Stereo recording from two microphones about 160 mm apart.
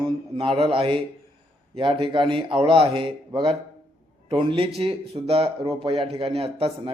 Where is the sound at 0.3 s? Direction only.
35° right (ahead or behind).